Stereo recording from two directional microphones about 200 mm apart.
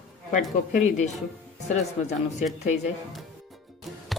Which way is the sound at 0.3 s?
35° left (ahead or behind).